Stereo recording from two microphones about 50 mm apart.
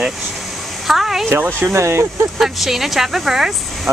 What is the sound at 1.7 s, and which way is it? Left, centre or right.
Speech, right.